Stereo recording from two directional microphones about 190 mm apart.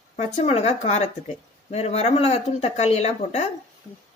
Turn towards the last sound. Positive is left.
turn(degrees=35)  # may be behind; listen again after turning